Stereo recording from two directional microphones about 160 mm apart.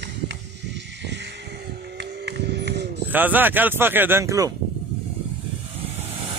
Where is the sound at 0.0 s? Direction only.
90° right.